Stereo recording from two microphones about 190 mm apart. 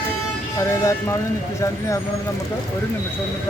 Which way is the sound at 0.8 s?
15° left (ahead or behind).